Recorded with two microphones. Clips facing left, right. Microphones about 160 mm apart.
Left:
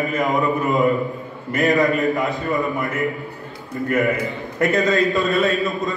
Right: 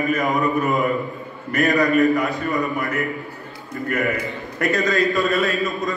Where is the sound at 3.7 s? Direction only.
20° left (ahead or behind).